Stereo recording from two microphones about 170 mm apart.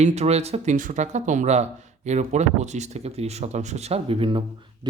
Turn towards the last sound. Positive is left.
turn(degrees=-30)  # may be behind; listen again after turning